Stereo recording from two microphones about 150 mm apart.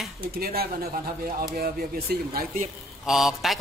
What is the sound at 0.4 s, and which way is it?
Speech, 90° right.